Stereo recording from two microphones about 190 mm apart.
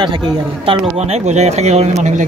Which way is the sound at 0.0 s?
25° right (ahead or behind).